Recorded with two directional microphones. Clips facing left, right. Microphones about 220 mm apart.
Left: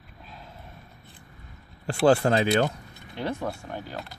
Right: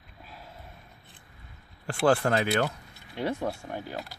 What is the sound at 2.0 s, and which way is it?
Speech, 25° left (ahead or behind).